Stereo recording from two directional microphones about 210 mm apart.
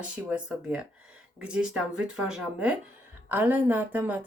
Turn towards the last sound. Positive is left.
turn(degrees=-10)  # may be behind; listen again after turning